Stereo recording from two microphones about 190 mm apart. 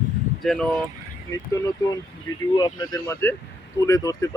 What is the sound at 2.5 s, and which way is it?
Speech, 20° left (ahead or behind).